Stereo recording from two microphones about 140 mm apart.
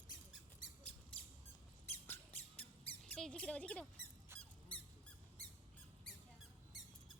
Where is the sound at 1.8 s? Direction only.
15° left (ahead or behind).